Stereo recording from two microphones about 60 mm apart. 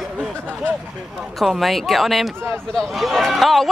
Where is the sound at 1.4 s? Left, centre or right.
Centre.